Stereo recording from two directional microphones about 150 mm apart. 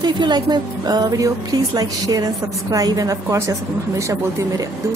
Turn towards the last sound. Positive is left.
turn(degrees=-20)  # may be behind; listen again after turning